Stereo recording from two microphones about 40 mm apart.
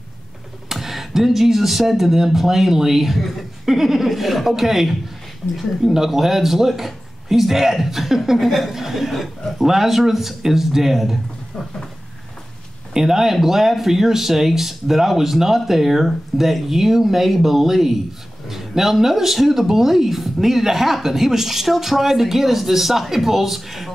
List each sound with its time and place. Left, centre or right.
0.7 s speech: centre
12.9 s speech: centre